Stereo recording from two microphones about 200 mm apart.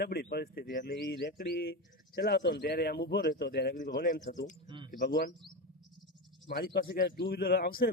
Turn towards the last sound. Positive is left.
turn(degrees=50)  # may be behind; listen again after turning